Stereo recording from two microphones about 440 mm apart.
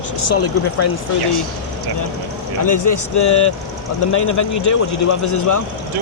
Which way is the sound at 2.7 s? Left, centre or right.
Left.